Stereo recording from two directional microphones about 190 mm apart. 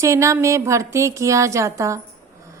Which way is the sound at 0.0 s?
15° right (ahead or behind).